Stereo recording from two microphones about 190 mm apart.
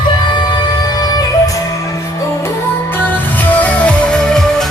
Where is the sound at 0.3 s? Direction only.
25° left (ahead or behind).